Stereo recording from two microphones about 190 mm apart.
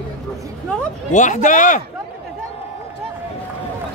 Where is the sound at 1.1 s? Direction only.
40° left (ahead or behind).